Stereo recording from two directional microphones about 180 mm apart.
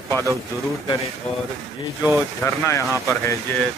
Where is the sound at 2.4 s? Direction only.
15° left (ahead or behind).